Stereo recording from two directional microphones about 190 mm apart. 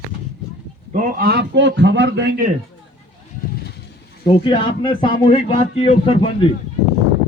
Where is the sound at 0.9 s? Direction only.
45° right (ahead or behind); by 2.3 s 65° right (ahead or behind).